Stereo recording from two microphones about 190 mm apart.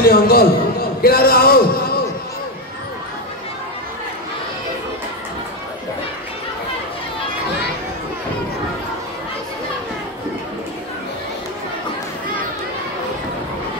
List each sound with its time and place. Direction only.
0.0 s a man's voice: 50° left (ahead or behind)